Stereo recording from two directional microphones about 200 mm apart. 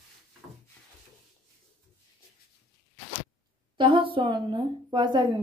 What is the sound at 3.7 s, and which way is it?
A woman's voice, 25° right (ahead or behind).